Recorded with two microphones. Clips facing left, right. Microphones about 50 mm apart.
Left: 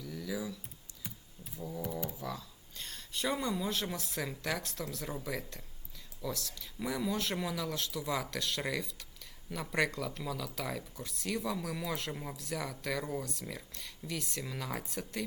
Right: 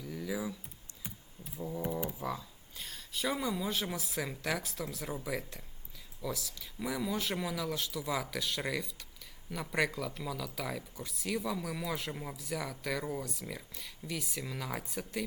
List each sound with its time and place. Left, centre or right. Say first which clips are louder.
0.0 s computer keyboard: right 1 dB; centre
1.5 s speech: right 3 dB; centre
2.8 s speech: even; centre